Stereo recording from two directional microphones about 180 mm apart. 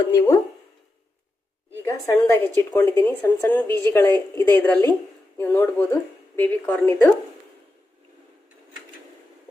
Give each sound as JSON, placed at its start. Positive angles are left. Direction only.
{"t": 0.1, "sound": "speech", "side_deg": 20}
{"t": 1.9, "sound": "a woman's voice", "side_deg": 15}